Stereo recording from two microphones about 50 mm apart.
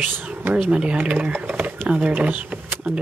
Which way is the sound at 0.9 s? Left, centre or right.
Right.